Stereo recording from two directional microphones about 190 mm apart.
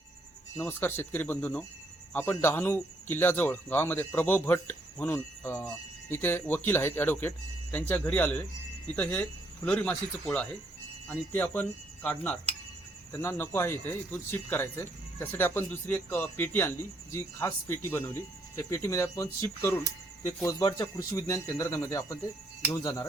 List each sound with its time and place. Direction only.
0.5 s speech: 10° left (ahead or behind)